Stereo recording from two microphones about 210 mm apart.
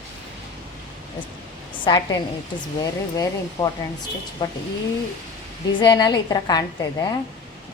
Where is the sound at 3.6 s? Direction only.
15° left (ahead or behind).